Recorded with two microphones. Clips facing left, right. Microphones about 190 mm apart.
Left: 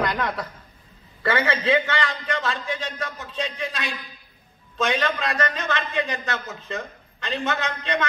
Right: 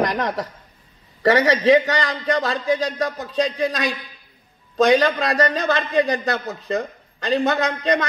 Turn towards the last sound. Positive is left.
turn(degrees=-35)  # may be behind; listen again after turning